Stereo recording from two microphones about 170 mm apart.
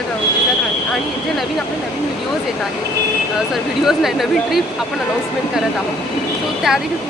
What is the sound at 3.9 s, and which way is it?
Speech, centre (ahead or behind).